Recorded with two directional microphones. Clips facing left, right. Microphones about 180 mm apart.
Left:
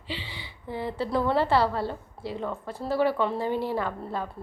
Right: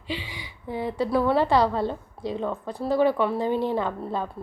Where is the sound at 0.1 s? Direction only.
15° right (ahead or behind).